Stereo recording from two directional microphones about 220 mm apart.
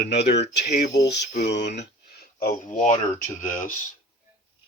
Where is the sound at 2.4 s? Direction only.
35° left (ahead or behind).